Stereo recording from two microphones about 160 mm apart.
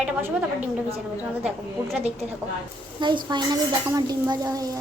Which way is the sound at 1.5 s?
Centre (ahead or behind).